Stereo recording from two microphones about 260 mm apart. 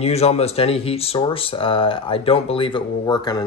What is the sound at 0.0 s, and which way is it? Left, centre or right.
Speech, left.